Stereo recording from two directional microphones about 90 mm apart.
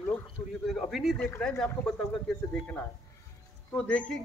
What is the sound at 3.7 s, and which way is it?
Speech, 10° left (ahead or behind).